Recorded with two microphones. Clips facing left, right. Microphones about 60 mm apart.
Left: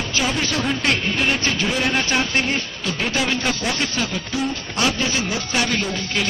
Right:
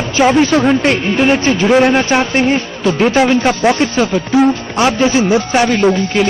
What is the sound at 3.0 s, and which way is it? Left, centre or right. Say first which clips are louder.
Speech: right 11 dB; right.